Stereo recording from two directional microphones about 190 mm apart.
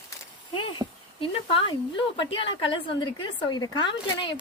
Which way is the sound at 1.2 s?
30° left (ahead or behind).